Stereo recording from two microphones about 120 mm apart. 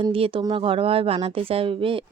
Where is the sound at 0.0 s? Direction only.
50° right (ahead or behind).